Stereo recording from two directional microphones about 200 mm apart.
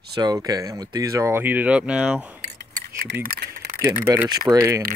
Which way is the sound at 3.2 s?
45° right (ahead or behind).